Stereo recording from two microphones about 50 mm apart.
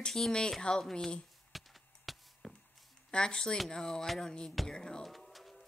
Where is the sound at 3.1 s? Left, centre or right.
Centre.